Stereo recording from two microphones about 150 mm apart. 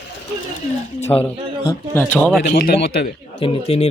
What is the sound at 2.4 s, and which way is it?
Speech, 90° left.